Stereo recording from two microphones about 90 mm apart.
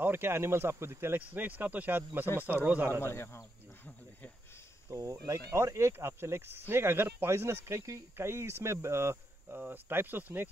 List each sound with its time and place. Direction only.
0.0 s speech: 25° right (ahead or behind)
3.0 s speech: 30° left (ahead or behind)
4.8 s speech: 40° right (ahead or behind); by 10.5 s 20° right (ahead or behind)